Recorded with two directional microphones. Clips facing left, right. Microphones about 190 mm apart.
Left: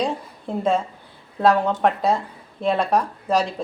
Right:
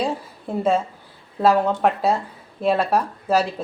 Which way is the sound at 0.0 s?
5° right (ahead or behind).